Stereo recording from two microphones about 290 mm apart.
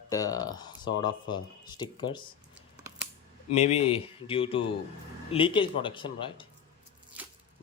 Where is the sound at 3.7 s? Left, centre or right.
Centre.